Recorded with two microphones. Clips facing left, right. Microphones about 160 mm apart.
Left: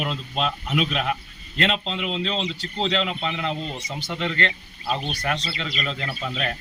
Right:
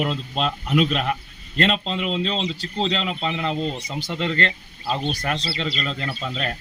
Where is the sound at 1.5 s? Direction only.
40° right (ahead or behind).